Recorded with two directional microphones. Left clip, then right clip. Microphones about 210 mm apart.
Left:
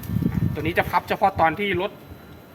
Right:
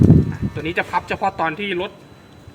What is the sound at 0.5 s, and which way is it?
Speech, 20° left (ahead or behind).